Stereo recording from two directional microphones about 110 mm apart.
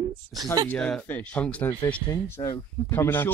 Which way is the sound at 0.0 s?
35° right (ahead or behind).